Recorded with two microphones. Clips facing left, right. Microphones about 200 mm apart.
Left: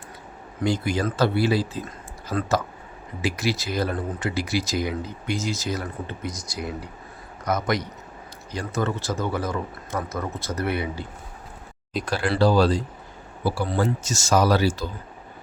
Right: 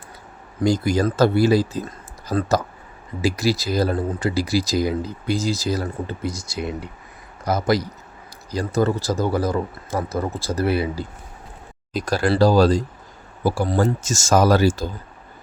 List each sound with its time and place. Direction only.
0.6 s speech: 40° right (ahead or behind)
12.0 s speech: 40° right (ahead or behind)